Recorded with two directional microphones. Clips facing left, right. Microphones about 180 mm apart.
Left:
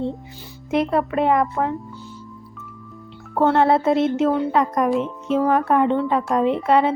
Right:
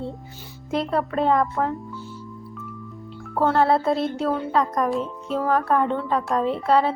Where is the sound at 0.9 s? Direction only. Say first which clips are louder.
Even; 5° left (ahead or behind).